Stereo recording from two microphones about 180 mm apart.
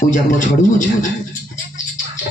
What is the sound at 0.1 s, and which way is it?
Speech, 45° left (ahead or behind).